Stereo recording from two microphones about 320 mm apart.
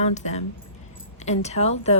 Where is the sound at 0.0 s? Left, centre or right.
Left.